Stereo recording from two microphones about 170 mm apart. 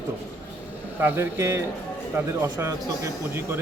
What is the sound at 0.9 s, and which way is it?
Speech, 10° right (ahead or behind).